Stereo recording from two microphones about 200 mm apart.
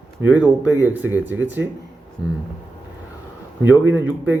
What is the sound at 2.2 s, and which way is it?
Speech, 65° right (ahead or behind).